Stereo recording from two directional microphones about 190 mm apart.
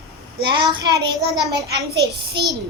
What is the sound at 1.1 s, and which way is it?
Speech, centre (ahead or behind).